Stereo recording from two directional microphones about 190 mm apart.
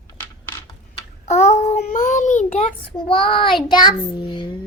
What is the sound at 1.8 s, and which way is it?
A child's voice, 40° left (ahead or behind).